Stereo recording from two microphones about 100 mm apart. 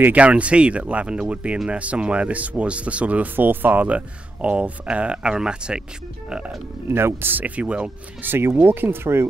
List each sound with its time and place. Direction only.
0.0 s speech: 15° right (ahead or behind)
6.9 s speech: 25° right (ahead or behind)